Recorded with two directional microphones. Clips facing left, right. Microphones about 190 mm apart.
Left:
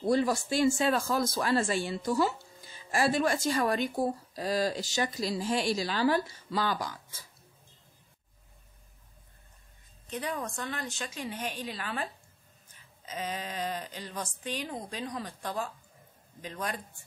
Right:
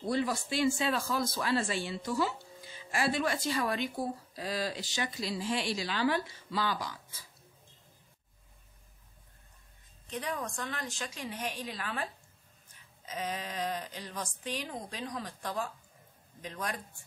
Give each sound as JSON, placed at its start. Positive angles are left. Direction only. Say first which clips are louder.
{"t": 0.1, "sound": "speech", "louder": "left 5 dB", "side_deg": 45}
{"t": 10.0, "sound": "speech", "louder": "left 2 dB", "side_deg": 0}